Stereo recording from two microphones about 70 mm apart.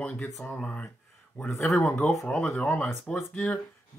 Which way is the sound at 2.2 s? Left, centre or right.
Centre.